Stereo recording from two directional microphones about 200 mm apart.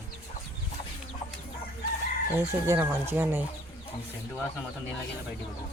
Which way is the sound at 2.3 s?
10° right (ahead or behind).